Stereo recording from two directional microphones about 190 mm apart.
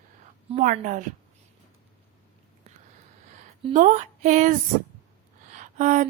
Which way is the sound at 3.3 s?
40° right (ahead or behind).